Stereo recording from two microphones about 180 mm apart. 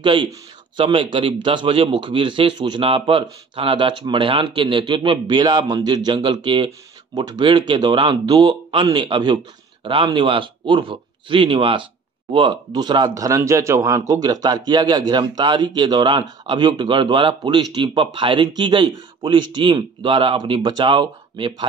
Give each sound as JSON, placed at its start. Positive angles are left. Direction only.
{"t": 0.0, "sound": "speech", "side_deg": -25}